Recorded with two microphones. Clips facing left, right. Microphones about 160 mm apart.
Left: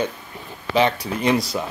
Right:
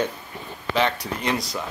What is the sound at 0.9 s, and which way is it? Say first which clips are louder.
Speech: left 6 dB; 5° left (ahead or behind).